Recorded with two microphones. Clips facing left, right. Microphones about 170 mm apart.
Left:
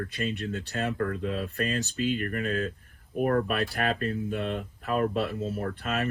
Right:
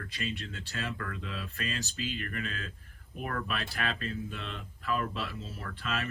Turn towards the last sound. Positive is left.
turn(degrees=50)  # may be behind; listen again after turning